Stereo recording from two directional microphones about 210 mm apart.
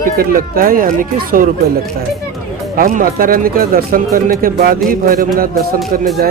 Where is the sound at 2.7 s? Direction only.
40° right (ahead or behind).